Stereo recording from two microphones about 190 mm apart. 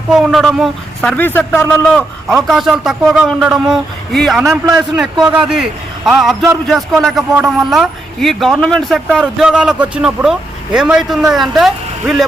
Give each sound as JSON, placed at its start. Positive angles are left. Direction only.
{"t": 0.1, "sound": "a man's voice", "side_deg": 0}
{"t": 4.4, "sound": "a man's voice", "side_deg": -15}
{"t": 4.7, "sound": "a man's voice", "side_deg": -5}